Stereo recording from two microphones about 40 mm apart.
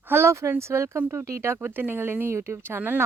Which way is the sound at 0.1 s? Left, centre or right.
Right.